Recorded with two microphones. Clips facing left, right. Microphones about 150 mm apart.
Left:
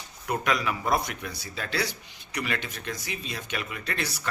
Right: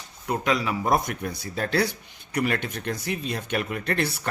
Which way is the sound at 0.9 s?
45° right (ahead or behind).